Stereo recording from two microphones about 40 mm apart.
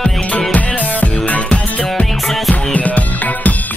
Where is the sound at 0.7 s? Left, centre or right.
Left.